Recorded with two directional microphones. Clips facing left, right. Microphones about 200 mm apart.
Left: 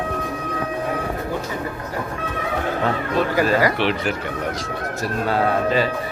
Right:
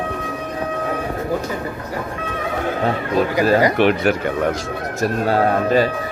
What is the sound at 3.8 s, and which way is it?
Speech, 50° right (ahead or behind).